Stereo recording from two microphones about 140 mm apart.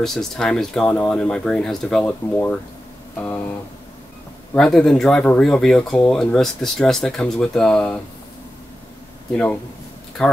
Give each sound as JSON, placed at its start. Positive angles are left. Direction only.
{"t": 0.0, "sound": "speech", "side_deg": 5}
{"t": 4.6, "sound": "speech", "side_deg": 5}
{"t": 9.3, "sound": "speech", "side_deg": 10}